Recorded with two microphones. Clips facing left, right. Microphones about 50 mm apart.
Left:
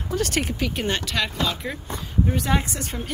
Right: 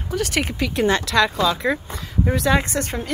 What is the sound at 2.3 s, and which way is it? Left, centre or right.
Speech, right.